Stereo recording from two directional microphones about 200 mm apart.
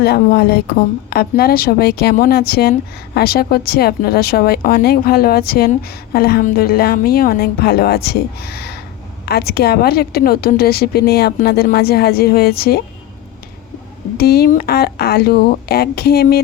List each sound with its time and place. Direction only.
0.0 s a woman's voice: 55° left (ahead or behind)
14.2 s a woman's voice: 50° left (ahead or behind)